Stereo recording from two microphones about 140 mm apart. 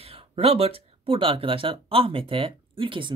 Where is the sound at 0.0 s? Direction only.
45° right (ahead or behind).